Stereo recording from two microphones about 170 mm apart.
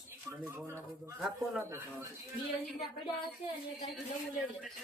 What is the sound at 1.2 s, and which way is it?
Speech, 15° right (ahead or behind).